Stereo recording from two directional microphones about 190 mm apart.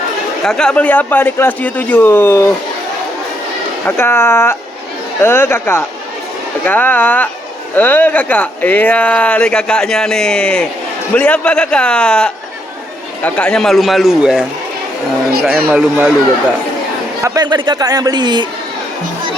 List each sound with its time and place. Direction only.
0.4 s speech: 5° left (ahead or behind)
3.8 s a man's voice: 10° left (ahead or behind); by 14.4 s 5° right (ahead or behind)
15.7 s speech: 5° right (ahead or behind)
17.2 s a man's voice: 20° right (ahead or behind)